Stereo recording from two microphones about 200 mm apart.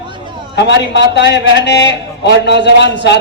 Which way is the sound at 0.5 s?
60° left (ahead or behind).